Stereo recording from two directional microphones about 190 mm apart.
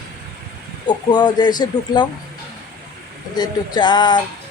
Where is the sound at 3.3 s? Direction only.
20° left (ahead or behind).